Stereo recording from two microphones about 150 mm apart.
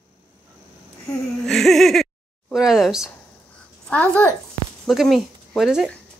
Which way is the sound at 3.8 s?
10° left (ahead or behind).